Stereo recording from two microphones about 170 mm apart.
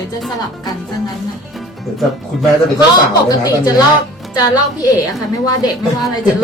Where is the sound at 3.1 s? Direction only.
20° left (ahead or behind).